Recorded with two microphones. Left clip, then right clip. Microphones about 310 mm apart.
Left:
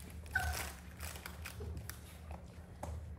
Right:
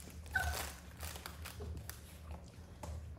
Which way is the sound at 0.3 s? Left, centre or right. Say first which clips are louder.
Even; right.